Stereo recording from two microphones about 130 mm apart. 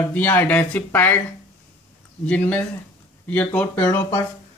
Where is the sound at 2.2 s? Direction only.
10° left (ahead or behind).